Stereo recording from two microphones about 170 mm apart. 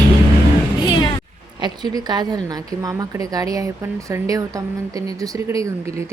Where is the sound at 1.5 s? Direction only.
25° right (ahead or behind).